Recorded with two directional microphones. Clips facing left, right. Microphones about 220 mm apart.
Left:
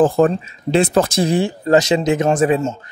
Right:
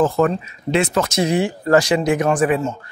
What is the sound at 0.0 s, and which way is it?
Speech, 30° left (ahead or behind).